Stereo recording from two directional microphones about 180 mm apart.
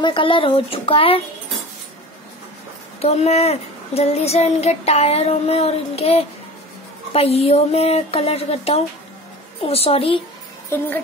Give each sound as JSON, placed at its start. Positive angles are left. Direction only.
{"t": 0.0, "sound": "speech", "side_deg": 30}
{"t": 3.0, "sound": "speech", "side_deg": 35}